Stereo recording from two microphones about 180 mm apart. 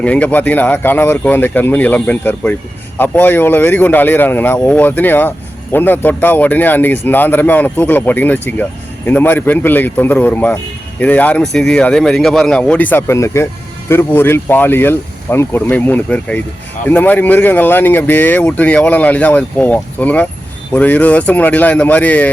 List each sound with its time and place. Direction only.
0.0 s speech: 10° left (ahead or behind)